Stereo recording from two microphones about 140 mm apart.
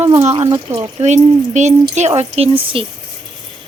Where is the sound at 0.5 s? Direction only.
30° right (ahead or behind).